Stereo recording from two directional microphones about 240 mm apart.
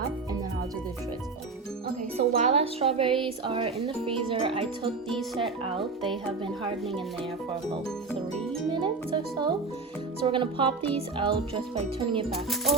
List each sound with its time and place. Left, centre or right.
2.3 s speech: right
8.7 s speech: right
12.3 s speech: centre